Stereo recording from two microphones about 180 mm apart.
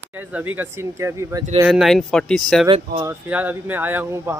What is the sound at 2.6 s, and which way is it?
Speech, 35° right (ahead or behind).